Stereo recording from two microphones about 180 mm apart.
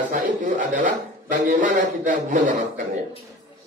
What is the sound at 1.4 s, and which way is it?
A man's voice, 45° right (ahead or behind).